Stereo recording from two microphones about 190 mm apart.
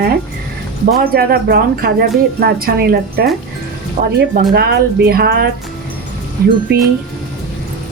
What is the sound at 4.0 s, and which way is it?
Speech, 45° right (ahead or behind).